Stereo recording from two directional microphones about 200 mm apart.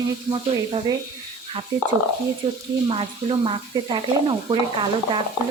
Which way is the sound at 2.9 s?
25° right (ahead or behind).